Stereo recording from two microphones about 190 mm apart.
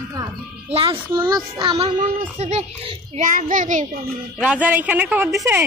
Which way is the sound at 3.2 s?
45° right (ahead or behind).